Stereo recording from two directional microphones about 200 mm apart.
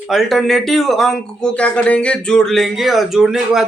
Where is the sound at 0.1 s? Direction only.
Centre (ahead or behind).